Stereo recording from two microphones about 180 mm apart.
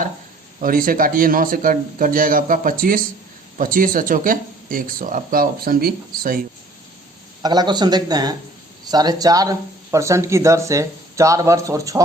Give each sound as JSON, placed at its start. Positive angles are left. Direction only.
{"t": 0.6, "sound": "speech", "side_deg": -50}
{"t": 7.4, "sound": "speech", "side_deg": -25}